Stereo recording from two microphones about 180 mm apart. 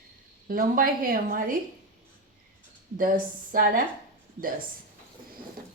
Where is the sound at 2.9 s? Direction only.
50° right (ahead or behind).